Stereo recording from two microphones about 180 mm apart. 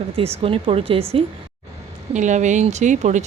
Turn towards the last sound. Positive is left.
turn(degrees=-40)  # may be behind; listen again after turning